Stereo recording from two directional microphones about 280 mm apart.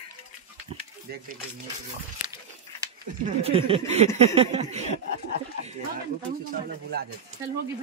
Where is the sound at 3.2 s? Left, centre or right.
Right.